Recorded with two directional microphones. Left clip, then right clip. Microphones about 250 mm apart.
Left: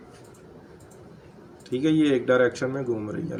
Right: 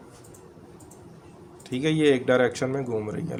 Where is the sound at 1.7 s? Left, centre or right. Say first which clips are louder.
Even; right.